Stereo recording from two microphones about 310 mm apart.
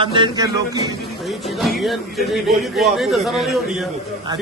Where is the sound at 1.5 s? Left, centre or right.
Centre.